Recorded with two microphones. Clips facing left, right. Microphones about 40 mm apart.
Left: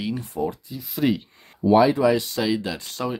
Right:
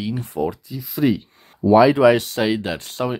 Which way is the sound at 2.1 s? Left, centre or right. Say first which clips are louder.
Right 3 dB; right.